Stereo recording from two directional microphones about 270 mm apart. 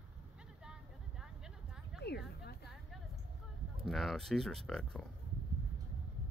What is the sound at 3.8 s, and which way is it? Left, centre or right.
Speech, centre.